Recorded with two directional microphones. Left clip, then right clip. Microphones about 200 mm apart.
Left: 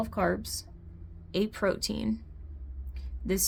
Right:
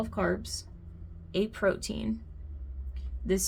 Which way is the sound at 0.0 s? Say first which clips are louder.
Left 2 dB; 35° left (ahead or behind).